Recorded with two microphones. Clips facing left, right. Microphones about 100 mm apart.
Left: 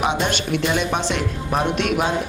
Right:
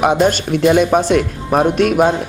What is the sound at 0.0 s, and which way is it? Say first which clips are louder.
Speech: right 8 dB; 45° right (ahead or behind).